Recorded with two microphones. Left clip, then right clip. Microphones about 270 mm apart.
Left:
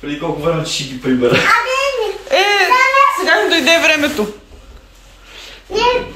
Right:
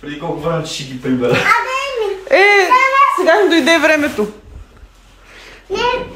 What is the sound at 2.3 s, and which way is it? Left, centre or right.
A woman's voice, right.